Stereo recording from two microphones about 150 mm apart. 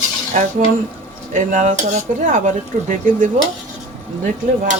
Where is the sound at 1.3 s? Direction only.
55° right (ahead or behind).